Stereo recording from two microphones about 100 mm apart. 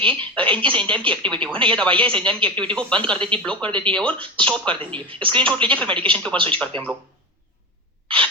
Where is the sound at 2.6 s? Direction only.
10° left (ahead or behind).